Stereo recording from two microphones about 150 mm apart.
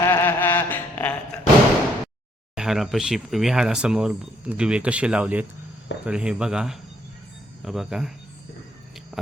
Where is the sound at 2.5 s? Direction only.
5° right (ahead or behind).